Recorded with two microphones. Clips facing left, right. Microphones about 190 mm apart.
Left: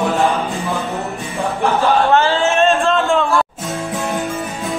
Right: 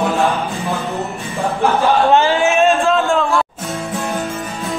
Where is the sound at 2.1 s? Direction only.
15° right (ahead or behind).